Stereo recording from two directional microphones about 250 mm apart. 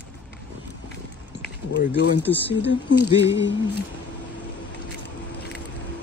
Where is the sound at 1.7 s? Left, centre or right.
Left.